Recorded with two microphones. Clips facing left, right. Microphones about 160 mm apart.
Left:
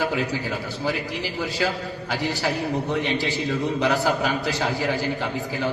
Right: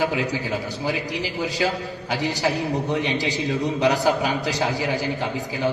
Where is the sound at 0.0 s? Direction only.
15° right (ahead or behind).